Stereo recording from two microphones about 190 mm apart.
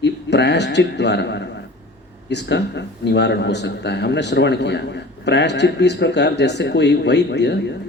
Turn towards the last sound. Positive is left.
turn(degrees=65)  # may be behind; listen again after turning